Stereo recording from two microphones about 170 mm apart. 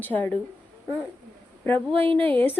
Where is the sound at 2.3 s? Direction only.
10° left (ahead or behind).